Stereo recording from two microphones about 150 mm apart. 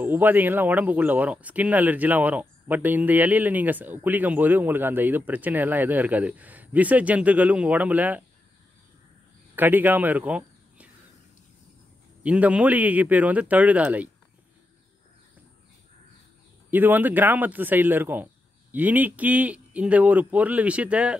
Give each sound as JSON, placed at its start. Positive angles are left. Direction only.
{"t": 0.0, "sound": "speech", "side_deg": -10}
{"t": 9.6, "sound": "speech", "side_deg": -10}
{"t": 12.2, "sound": "speech", "side_deg": -10}
{"t": 16.7, "sound": "speech", "side_deg": -10}